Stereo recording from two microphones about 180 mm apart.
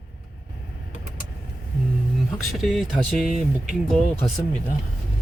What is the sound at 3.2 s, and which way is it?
Speech, 40° right (ahead or behind).